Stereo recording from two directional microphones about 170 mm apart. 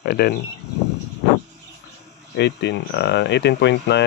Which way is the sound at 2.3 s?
90° left.